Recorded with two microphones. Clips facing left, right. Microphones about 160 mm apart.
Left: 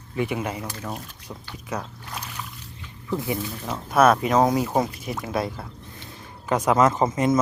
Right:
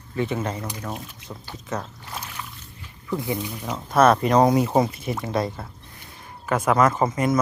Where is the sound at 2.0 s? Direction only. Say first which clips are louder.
Even; centre (ahead or behind).